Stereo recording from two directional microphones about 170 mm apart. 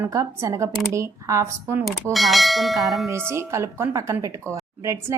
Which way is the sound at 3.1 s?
15° right (ahead or behind).